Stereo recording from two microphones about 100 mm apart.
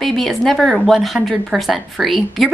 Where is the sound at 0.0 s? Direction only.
Centre (ahead or behind).